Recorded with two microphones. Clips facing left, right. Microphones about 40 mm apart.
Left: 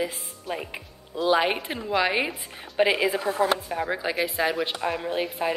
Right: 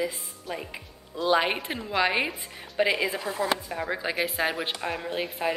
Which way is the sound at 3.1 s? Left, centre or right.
Left.